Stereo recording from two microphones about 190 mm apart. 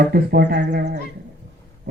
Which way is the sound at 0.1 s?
55° right (ahead or behind).